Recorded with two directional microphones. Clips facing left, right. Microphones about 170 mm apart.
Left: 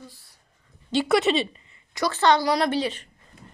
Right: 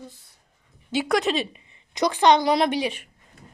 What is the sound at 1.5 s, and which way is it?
Speech, 20° right (ahead or behind).